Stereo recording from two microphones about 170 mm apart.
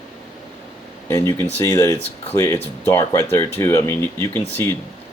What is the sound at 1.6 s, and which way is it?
Speech, 15° left (ahead or behind).